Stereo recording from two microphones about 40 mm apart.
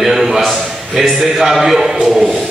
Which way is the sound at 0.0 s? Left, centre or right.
Centre.